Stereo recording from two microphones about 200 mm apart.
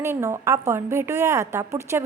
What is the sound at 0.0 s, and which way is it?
A woman's voice, 15° right (ahead or behind).